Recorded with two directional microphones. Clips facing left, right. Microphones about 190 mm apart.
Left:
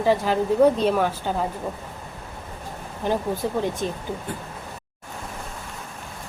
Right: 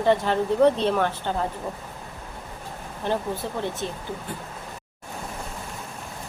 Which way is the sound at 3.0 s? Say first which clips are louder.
Left 3 dB; 10° left (ahead or behind).